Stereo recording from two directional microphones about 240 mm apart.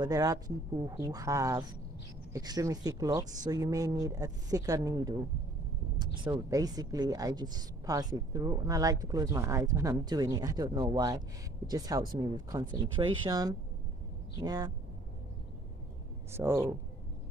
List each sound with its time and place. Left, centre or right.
0.0 s speech: centre
6.2 s speech: centre
16.3 s speech: centre